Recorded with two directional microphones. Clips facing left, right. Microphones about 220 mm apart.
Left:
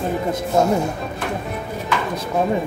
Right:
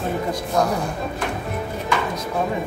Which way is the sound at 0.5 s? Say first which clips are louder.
Left 4 dB; 25° left (ahead or behind).